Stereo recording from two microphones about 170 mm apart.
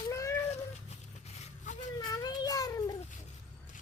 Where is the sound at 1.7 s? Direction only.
45° left (ahead or behind).